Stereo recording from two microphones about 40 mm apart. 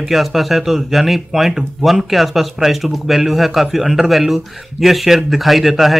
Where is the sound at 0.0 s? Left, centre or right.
Centre.